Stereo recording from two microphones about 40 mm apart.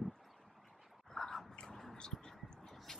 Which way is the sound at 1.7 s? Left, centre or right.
Centre.